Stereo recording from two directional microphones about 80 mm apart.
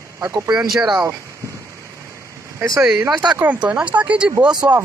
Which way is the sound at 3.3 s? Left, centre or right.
Centre.